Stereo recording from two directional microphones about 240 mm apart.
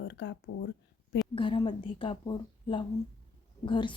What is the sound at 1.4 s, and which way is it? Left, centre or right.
A woman's voice, left.